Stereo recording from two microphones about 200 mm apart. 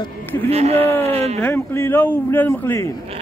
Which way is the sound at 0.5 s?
30° right (ahead or behind).